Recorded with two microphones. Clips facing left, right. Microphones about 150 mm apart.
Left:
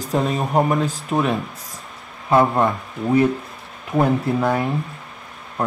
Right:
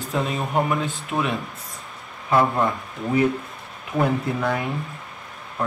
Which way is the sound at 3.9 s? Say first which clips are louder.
Left 4 dB; 35° left (ahead or behind).